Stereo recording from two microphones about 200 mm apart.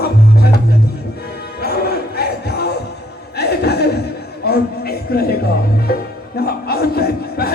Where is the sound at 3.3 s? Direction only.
55° left (ahead or behind).